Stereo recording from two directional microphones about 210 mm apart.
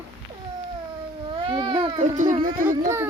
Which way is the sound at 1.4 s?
20° right (ahead or behind).